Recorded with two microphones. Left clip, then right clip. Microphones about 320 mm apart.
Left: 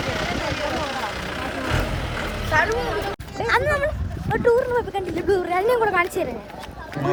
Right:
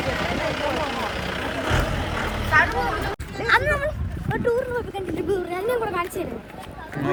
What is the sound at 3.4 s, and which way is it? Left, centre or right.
Cat, left.